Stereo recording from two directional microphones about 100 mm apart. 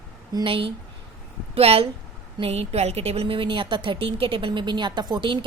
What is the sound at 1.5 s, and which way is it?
Speech, 75° right (ahead or behind).